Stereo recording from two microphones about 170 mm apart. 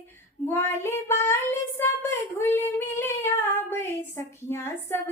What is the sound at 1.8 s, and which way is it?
Female singing, 15° left (ahead or behind).